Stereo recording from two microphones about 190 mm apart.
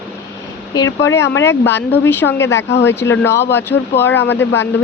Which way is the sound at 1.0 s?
15° left (ahead or behind).